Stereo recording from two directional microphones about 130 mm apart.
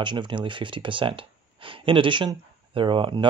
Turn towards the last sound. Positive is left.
turn(degrees=-40)  # may be behind; listen again after turning